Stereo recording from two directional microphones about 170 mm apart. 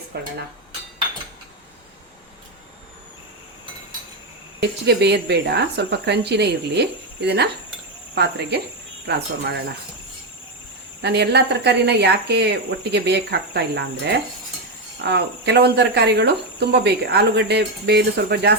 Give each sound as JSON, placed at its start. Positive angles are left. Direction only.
{"t": 0.1, "sound": "speech", "side_deg": -70}
{"t": 4.6, "sound": "speech", "side_deg": -80}
{"t": 9.0, "sound": "speech", "side_deg": -85}
{"t": 11.0, "sound": "speech", "side_deg": -80}
{"t": 15.0, "sound": "speech", "side_deg": -80}